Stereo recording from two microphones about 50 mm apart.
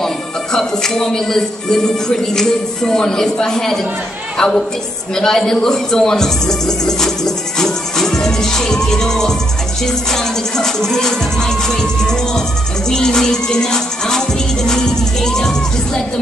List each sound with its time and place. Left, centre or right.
0.0 s speech: centre
5.1 s music: centre